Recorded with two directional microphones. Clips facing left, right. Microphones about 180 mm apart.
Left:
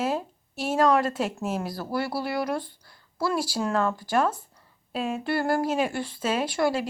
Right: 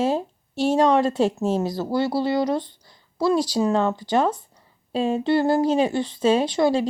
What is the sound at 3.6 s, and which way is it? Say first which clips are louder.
Speech: right 5 dB; 20° right (ahead or behind).